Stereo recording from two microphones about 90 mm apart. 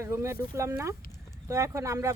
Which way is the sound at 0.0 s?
30° right (ahead or behind).